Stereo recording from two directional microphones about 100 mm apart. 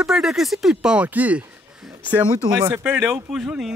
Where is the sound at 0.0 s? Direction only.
5° right (ahead or behind).